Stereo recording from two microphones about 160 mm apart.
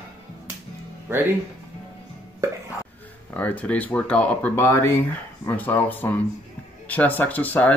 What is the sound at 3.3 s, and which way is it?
Speech, 10° left (ahead or behind).